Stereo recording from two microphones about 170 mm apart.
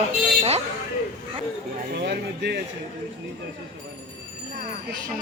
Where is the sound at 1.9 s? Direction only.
80° right.